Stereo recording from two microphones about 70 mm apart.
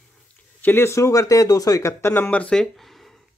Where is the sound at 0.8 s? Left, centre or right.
Left.